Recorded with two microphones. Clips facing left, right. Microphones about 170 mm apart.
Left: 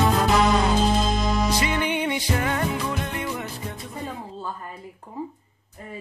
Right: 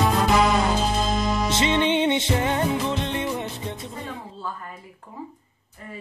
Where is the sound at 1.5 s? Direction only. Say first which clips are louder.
Right 3 dB; 25° right (ahead or behind).